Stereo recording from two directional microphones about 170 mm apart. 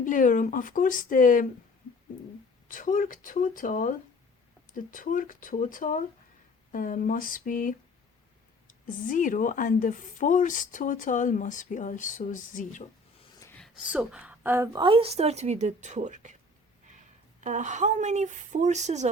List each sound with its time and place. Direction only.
0.0 s speech: 50° left (ahead or behind)
2.6 s speech: 50° left (ahead or behind)
13.4 s a sound: 10° left (ahead or behind)
13.7 s a woman's voice: 5° right (ahead or behind)
14.8 s a woman's voice: 30° right (ahead or behind)
17.4 s speech: 45° right (ahead or behind)